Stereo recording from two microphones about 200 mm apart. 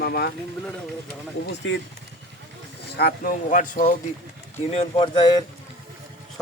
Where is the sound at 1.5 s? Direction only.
65° left (ahead or behind).